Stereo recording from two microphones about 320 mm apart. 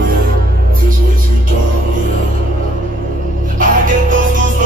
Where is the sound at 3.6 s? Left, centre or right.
Right.